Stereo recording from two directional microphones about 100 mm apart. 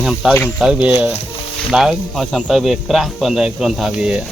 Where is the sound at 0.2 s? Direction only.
5° right (ahead or behind).